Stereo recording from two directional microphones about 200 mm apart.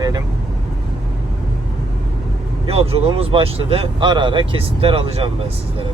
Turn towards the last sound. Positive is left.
turn(degrees=-30)  # may be behind; listen again after turning